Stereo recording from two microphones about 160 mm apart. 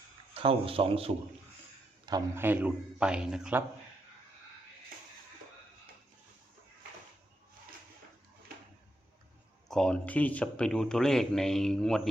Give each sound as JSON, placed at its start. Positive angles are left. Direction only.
{"t": 0.3, "sound": "a man's voice", "side_deg": -35}
{"t": 2.3, "sound": "a man's voice", "side_deg": -15}
{"t": 9.6, "sound": "speech", "side_deg": 5}